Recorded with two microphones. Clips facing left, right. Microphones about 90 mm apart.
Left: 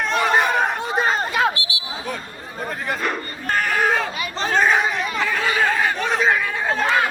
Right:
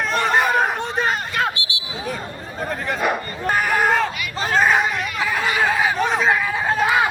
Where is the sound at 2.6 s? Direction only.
Centre (ahead or behind).